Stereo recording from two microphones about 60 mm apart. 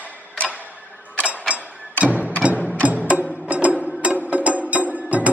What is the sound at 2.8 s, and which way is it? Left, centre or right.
Music, right.